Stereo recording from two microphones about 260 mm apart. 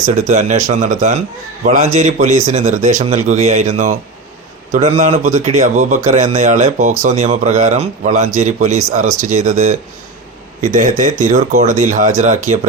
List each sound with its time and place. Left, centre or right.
0.3 s a man's voice: right